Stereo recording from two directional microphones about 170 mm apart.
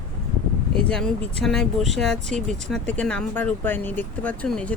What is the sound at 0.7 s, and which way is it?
Speech, 5° left (ahead or behind).